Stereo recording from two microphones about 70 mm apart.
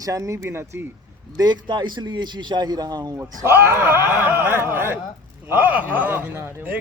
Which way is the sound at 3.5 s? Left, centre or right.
Right.